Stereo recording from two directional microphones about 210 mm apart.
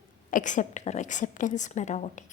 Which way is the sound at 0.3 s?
40° left (ahead or behind).